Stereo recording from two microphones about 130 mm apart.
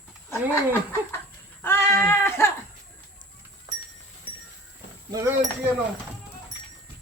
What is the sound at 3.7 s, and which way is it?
Goat, 25° right (ahead or behind).